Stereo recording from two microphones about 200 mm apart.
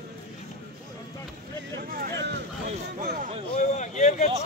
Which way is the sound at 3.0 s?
45° right (ahead or behind).